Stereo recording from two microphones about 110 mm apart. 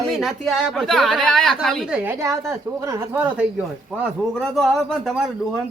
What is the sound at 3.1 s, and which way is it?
Speech, 10° right (ahead or behind).